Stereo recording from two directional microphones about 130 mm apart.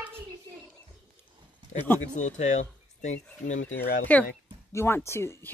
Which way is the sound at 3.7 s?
10° left (ahead or behind).